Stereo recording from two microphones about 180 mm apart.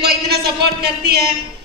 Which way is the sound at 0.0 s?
60° right (ahead or behind).